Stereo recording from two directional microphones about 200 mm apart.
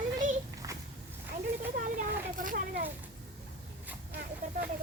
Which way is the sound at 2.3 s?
45° right (ahead or behind).